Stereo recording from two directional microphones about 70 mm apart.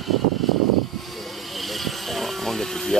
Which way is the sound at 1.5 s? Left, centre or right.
Centre.